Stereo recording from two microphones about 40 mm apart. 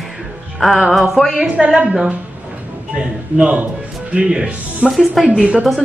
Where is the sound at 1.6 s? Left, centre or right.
Right.